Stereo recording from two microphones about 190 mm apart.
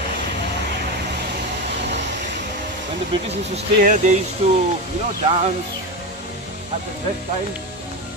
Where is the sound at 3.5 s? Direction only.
40° right (ahead or behind).